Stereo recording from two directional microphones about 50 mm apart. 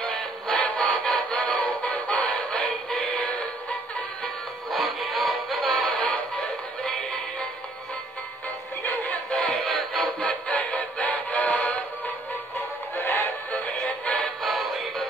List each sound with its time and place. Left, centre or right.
0.0 s music: centre
0.9 s music: centre
1.3 s music: left
1.9 s synthetic singing: left
4.6 s music: centre
5.9 s music: left
6.3 s music: centre
9.3 s synthetic singing: left
9.7 s music: centre
10.2 s synthetic singing: left
12.9 s synthetic singing: left
13.5 s synthetic singing: left
14.4 s music: centre